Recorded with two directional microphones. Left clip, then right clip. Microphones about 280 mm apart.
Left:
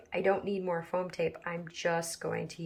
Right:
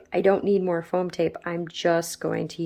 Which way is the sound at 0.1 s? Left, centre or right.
Right.